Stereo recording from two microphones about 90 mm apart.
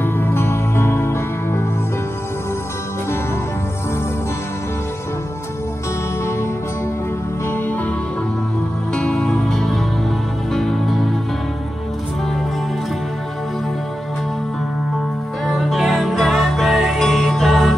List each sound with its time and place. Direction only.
0.0 s music: 25° left (ahead or behind)
7.4 s music: 20° left (ahead or behind)
8.9 s music: 10° left (ahead or behind)
15.4 s music: centre (ahead or behind)